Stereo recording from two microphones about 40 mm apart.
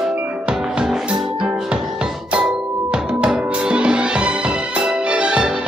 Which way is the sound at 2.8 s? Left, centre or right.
Right.